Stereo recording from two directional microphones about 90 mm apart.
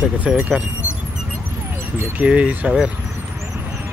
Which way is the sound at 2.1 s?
15° right (ahead or behind).